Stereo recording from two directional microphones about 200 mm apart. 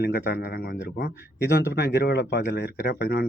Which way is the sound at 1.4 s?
55° left (ahead or behind).